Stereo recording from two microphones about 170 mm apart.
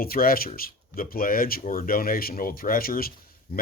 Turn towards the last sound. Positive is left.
turn(degrees=60)  # may be behind; listen again after turning